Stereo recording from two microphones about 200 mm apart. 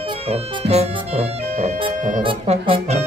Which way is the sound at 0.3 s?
30° right (ahead or behind).